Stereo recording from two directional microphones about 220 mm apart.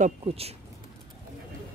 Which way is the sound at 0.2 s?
25° right (ahead or behind).